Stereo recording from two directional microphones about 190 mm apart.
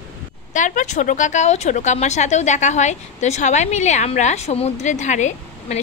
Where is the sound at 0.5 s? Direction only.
40° left (ahead or behind).